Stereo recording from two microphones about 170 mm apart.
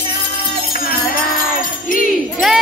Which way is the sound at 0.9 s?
55° left (ahead or behind).